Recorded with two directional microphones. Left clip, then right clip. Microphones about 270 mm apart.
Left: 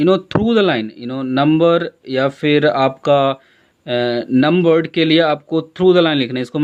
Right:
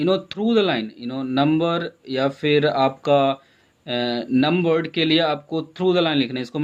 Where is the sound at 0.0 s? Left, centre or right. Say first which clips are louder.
Left 6 dB; left.